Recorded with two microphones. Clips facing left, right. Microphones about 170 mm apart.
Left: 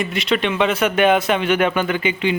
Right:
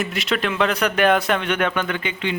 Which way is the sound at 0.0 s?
Centre (ahead or behind).